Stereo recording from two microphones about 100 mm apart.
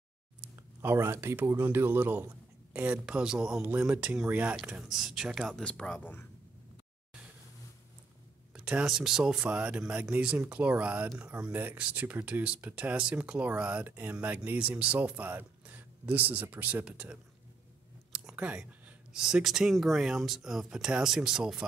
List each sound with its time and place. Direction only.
0.8 s speech: 25° right (ahead or behind); by 5.6 s 5° right (ahead or behind)
5.6 s speech: 10° left (ahead or behind)
8.5 s speech: 5° right (ahead or behind)